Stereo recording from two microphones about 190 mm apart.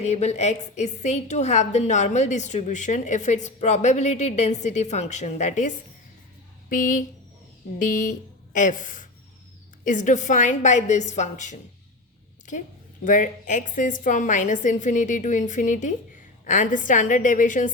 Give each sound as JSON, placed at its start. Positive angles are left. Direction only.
{"t": 0.0, "sound": "a woman's voice", "side_deg": 35}
{"t": 13.1, "sound": "a woman's voice", "side_deg": 40}